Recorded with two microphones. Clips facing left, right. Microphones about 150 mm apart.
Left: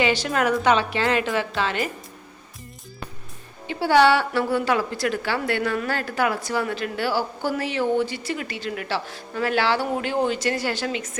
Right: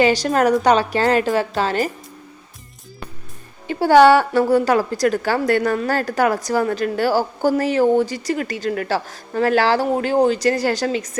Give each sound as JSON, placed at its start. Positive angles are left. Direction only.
{"t": 0.0, "sound": "a woman's voice", "side_deg": -40}
{"t": 3.7, "sound": "a woman's voice", "side_deg": -45}